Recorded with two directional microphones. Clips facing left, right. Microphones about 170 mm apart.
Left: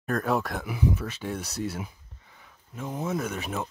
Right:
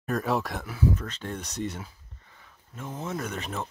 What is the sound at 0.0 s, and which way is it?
Speech, centre (ahead or behind).